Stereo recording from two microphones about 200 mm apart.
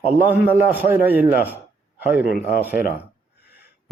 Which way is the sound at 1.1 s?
10° right (ahead or behind).